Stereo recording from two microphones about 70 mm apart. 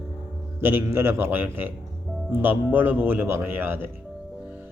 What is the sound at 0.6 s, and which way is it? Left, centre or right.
A man's voice, right.